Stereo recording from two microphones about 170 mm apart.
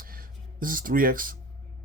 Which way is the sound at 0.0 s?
60° right (ahead or behind).